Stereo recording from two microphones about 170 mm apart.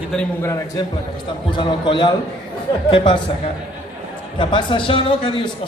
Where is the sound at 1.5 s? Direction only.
30° left (ahead or behind).